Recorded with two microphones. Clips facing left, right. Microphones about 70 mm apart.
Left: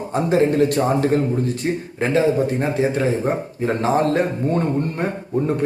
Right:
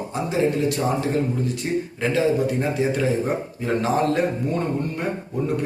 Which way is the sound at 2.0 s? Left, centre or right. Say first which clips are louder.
Left 4 dB; left.